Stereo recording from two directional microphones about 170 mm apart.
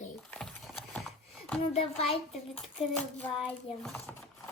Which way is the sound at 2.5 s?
5° left (ahead or behind).